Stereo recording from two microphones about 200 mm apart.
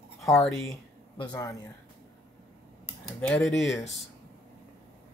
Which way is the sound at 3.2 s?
5° left (ahead or behind).